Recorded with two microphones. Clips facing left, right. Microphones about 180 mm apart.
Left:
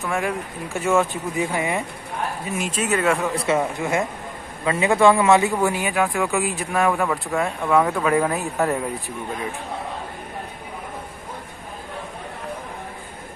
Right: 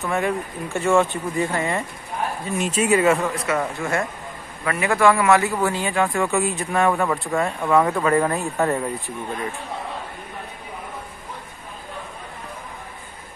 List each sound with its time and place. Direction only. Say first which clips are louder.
0.0 s speech: right 2 dB; centre (ahead or behind)
3.3 s a man's voice: left 2 dB; 25° left (ahead or behind)
6.0 s speech: right 1 dB; centre (ahead or behind)